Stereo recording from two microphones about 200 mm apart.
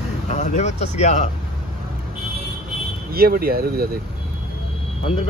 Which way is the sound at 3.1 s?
50° right (ahead or behind).